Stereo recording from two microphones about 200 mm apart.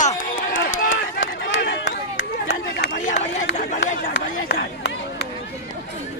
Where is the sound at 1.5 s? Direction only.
60° left (ahead or behind).